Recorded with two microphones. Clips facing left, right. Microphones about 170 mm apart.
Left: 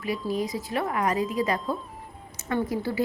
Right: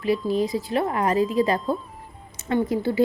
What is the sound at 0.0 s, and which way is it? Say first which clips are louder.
A woman's voice: right 6 dB; 30° right (ahead or behind).